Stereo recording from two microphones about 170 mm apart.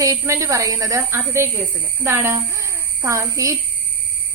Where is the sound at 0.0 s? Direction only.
20° right (ahead or behind).